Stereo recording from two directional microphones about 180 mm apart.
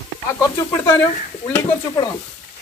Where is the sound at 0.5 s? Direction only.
15° left (ahead or behind).